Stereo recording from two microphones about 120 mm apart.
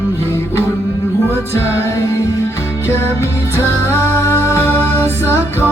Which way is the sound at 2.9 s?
20° left (ahead or behind).